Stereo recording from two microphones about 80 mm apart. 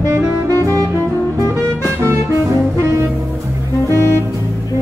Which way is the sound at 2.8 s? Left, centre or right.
Right.